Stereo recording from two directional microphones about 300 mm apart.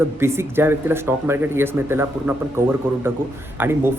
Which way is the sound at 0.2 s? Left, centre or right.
Centre.